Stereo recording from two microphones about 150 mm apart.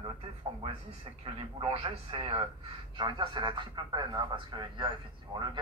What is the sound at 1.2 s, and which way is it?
A man's voice, 40° right (ahead or behind).